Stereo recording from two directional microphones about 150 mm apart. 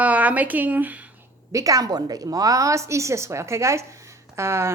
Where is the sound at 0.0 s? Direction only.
10° right (ahead or behind).